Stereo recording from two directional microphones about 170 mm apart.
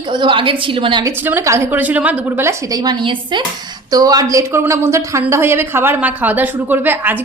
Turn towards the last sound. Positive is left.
turn(degrees=-10)  # may be behind; listen again after turning